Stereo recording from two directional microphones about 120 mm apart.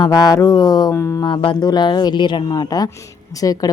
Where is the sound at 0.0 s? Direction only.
35° left (ahead or behind).